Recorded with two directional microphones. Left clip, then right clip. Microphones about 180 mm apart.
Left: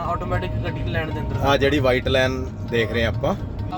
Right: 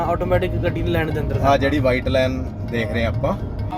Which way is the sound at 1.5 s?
35° left (ahead or behind).